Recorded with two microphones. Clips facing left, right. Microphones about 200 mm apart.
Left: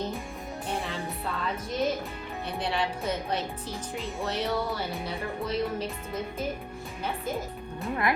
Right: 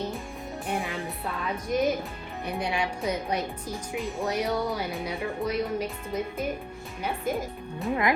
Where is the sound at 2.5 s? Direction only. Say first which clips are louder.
Right 1 dB; 15° right (ahead or behind).